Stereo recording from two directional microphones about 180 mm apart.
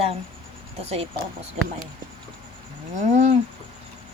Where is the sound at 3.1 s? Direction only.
40° right (ahead or behind).